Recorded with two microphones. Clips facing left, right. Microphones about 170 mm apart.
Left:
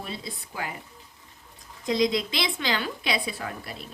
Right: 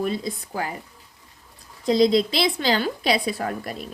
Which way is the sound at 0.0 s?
45° right (ahead or behind).